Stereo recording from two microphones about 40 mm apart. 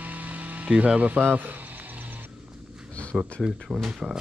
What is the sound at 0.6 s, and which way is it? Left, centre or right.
Speech, right.